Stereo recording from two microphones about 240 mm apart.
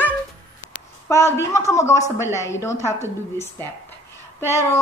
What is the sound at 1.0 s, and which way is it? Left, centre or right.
A woman's voice, centre.